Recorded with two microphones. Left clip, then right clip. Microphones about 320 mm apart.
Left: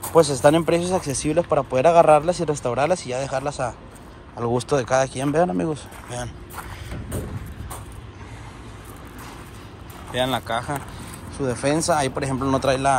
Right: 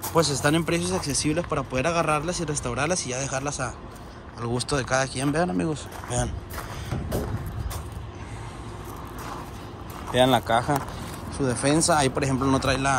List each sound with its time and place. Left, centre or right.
0.0 s speech: centre
10.1 s speech: centre